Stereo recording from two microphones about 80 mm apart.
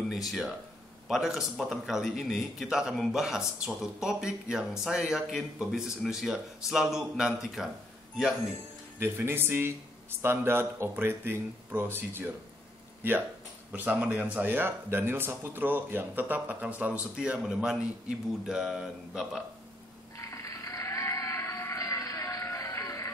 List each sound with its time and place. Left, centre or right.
0.1 s speech: centre
9.0 s speech: right; by 19.4 s centre
20.2 s music: left